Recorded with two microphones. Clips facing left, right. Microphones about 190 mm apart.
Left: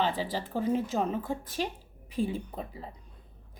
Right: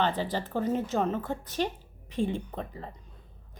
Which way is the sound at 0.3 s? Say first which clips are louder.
Even; 5° left (ahead or behind).